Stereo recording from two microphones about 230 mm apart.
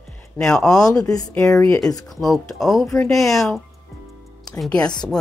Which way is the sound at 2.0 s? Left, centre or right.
Centre.